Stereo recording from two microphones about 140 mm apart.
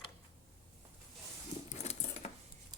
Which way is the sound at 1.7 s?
50° left (ahead or behind).